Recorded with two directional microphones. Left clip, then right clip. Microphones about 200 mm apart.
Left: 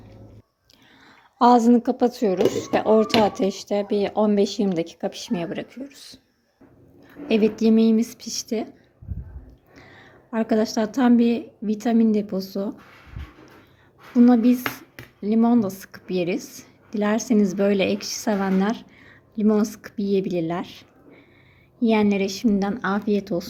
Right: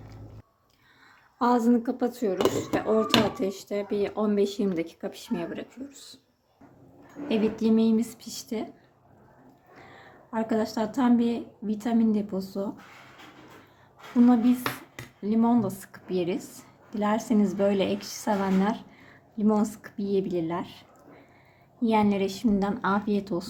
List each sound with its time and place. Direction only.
1.4 s a woman's voice: 25° left (ahead or behind)
7.3 s a woman's voice: 20° left (ahead or behind)
9.7 s a woman's voice: 20° left (ahead or behind)
14.3 s a woman's voice: 20° left (ahead or behind)